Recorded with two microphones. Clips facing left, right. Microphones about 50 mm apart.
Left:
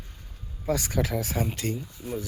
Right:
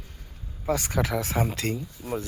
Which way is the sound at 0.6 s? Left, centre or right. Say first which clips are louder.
Right 1 dB; right.